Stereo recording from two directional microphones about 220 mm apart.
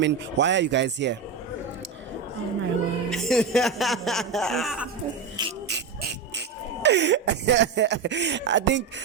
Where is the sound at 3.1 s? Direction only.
Centre (ahead or behind).